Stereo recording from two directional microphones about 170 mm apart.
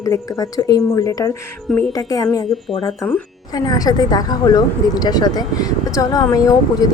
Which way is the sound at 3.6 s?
20° left (ahead or behind).